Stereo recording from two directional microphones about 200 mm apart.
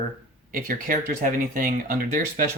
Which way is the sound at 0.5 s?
45° right (ahead or behind).